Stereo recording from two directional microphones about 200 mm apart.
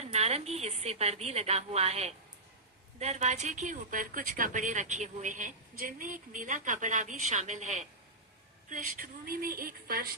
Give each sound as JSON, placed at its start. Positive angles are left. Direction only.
{"t": 0.0, "sound": "a woman's voice", "side_deg": -30}